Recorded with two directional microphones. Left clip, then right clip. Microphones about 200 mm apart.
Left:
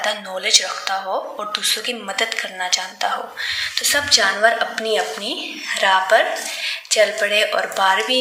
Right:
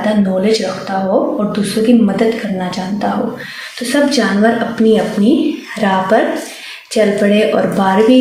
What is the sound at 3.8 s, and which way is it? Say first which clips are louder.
A woman's voice: right 4 dB; 40° left (ahead or behind).